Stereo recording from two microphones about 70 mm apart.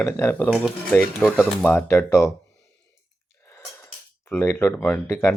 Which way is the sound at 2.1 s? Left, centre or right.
Left.